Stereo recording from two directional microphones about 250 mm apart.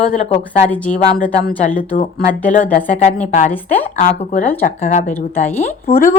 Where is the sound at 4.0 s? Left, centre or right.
Left.